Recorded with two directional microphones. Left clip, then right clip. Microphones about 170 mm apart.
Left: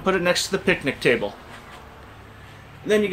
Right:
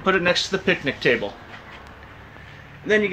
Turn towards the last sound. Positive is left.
turn(degrees=15)  # may be behind; listen again after turning